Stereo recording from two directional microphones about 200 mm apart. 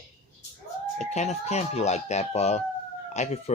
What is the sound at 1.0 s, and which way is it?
Speech, 35° left (ahead or behind).